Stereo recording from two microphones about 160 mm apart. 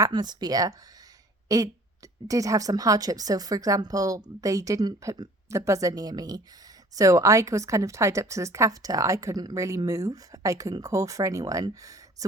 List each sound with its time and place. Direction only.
0.0 s a woman's voice: 25° right (ahead or behind)